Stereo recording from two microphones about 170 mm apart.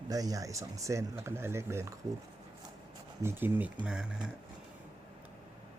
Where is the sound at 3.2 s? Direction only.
10° right (ahead or behind).